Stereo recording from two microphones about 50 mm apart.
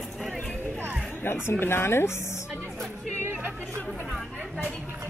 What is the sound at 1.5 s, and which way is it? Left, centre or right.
Speech, left.